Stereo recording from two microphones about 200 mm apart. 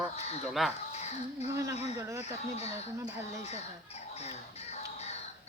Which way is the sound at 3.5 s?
30° left (ahead or behind).